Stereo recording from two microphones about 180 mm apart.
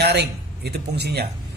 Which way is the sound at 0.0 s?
65° right (ahead or behind).